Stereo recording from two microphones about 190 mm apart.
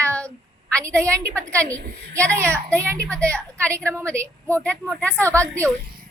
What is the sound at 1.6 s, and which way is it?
Speech, 45° right (ahead or behind).